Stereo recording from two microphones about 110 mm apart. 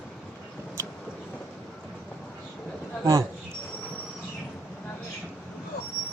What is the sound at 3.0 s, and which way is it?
Speech, 30° right (ahead or behind).